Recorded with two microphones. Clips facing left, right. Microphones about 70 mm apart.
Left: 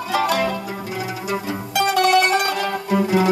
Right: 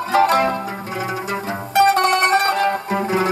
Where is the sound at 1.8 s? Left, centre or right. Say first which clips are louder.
Right 2 dB; right.